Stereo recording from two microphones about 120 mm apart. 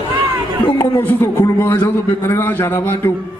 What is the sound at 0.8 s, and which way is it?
A man's voice, 20° left (ahead or behind).